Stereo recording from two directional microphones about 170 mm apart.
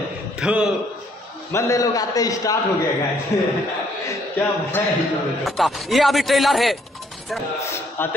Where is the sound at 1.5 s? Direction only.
20° left (ahead or behind).